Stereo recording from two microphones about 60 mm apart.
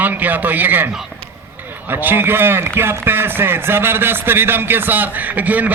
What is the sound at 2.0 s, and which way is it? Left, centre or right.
A man's voice, right.